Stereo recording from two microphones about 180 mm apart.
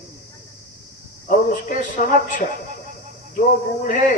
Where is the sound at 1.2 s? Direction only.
50° left (ahead or behind).